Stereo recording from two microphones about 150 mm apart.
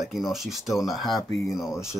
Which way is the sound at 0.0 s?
Centre (ahead or behind).